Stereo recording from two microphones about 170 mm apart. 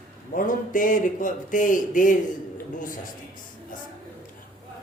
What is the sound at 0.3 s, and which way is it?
Speech, 50° left (ahead or behind).